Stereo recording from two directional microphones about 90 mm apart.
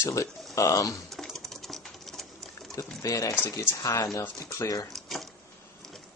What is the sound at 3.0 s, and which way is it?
Speech, 40° left (ahead or behind).